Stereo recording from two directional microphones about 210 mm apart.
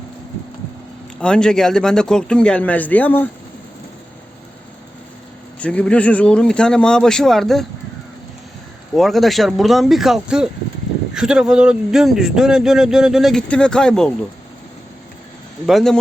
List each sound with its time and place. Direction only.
1.2 s speech: 5° left (ahead or behind)
5.5 s speech: 5° left (ahead or behind)
9.0 s speech: centre (ahead or behind)
15.6 s speech: centre (ahead or behind)